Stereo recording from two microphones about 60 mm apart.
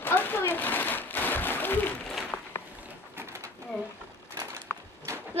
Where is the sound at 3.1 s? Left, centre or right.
Right.